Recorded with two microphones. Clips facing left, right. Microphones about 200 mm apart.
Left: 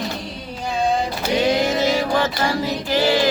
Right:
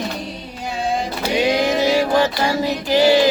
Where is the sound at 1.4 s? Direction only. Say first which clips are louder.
Right 2 dB; 15° right (ahead or behind).